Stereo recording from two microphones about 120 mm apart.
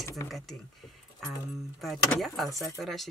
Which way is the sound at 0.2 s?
25° left (ahead or behind).